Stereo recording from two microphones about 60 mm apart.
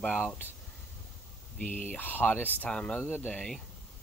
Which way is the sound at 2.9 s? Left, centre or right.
Left.